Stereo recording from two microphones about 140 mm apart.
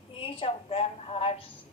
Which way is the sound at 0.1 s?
40° left (ahead or behind).